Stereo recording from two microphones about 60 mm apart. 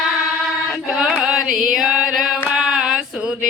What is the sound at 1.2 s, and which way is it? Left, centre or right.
Chant, centre.